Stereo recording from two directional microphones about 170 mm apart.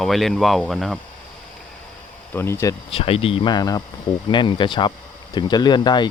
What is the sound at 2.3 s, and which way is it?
Speech, 15° left (ahead or behind).